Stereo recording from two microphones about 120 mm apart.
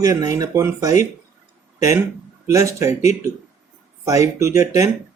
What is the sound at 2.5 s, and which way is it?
Speech, 25° right (ahead or behind).